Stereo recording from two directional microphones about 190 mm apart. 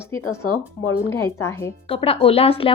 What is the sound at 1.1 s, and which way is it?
Speech, 15° left (ahead or behind).